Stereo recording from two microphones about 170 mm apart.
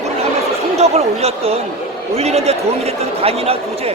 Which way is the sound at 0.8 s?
40° right (ahead or behind).